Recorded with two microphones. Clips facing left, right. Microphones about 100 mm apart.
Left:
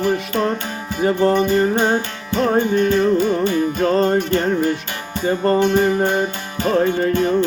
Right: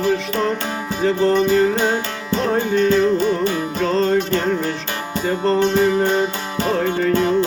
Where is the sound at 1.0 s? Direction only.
15° left (ahead or behind).